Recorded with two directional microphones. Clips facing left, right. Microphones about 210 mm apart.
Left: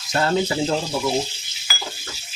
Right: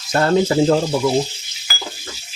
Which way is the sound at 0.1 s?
50° right (ahead or behind).